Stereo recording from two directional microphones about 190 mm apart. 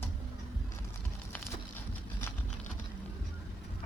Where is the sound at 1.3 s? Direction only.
10° left (ahead or behind).